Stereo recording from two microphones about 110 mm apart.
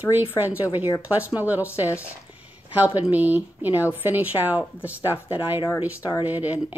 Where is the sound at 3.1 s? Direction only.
15° right (ahead or behind).